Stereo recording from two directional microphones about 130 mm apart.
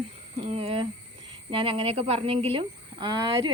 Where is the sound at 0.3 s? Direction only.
45° right (ahead or behind).